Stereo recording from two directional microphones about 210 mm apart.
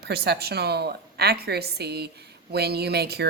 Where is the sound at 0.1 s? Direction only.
50° right (ahead or behind).